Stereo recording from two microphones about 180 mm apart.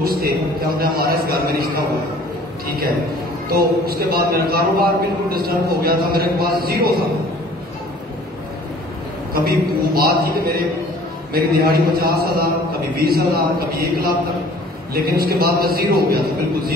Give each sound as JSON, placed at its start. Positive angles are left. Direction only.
{"t": 0.0, "sound": "a man's voice", "side_deg": -55}
{"t": 9.3, "sound": "a man's voice", "side_deg": -55}